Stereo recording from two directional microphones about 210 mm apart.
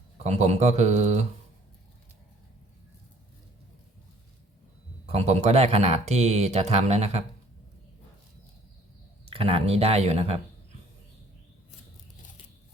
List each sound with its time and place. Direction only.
0.3 s speech: 30° right (ahead or behind)
5.0 s speech: 30° right (ahead or behind)
9.3 s speech: 25° right (ahead or behind)